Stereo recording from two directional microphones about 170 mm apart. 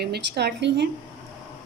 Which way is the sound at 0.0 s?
75° right (ahead or behind).